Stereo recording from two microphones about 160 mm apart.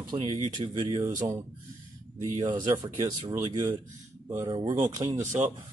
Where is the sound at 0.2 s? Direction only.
45° right (ahead or behind).